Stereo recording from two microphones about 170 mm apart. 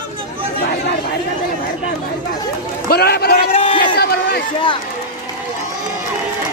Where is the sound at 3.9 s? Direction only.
65° left (ahead or behind).